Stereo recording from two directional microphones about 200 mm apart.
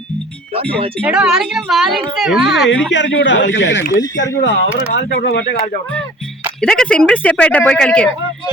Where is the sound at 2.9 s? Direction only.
65° left (ahead or behind).